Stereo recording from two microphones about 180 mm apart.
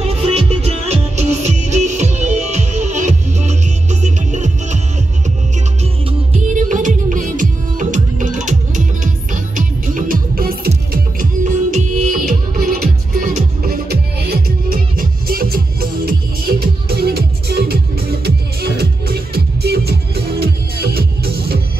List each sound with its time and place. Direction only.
0.1 s music: 35° right (ahead or behind)
6.7 s music: 45° right (ahead or behind)
13.7 s music: 60° right (ahead or behind)